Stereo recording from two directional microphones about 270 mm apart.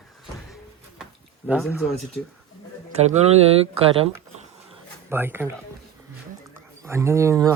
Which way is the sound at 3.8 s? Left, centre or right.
Right.